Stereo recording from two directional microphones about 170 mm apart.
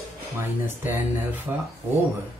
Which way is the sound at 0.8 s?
10° right (ahead or behind).